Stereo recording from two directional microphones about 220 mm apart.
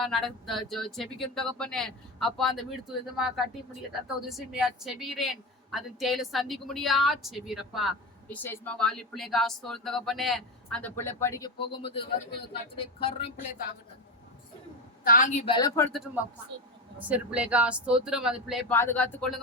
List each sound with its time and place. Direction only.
0.0 s a woman's voice: centre (ahead or behind); by 13.3 s 25° left (ahead or behind)
15.0 s a woman's voice: 35° left (ahead or behind)
15.4 s speech: 20° left (ahead or behind)
17.0 s a woman's voice: 5° right (ahead or behind)
18.7 s speech: 10° left (ahead or behind)